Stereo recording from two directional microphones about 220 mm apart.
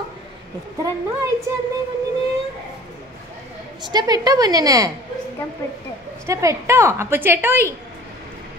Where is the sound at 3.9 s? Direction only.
20° right (ahead or behind).